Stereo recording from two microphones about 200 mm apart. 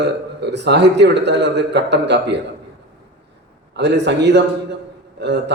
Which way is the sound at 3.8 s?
60° right (ahead or behind).